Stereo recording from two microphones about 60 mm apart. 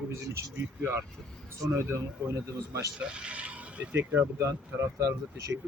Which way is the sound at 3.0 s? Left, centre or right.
Centre.